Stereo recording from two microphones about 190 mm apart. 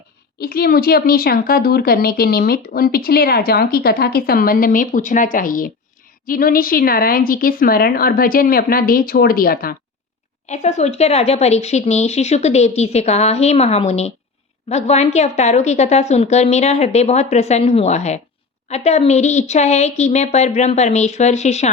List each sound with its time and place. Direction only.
0.3 s speech: 55° left (ahead or behind)
10.5 s speech: 35° left (ahead or behind)